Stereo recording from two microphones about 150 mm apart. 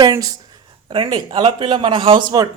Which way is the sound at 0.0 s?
25° right (ahead or behind).